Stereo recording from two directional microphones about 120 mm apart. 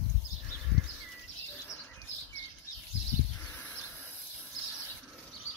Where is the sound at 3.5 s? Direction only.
15° left (ahead or behind).